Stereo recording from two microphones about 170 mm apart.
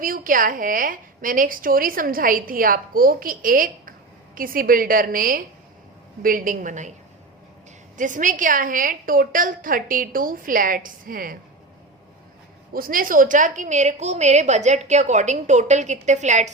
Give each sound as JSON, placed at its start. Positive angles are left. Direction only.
{"t": 0.0, "sound": "a woman's voice", "side_deg": -55}
{"t": 7.9, "sound": "a woman's voice", "side_deg": -50}
{"t": 12.7, "sound": "a woman's voice", "side_deg": -55}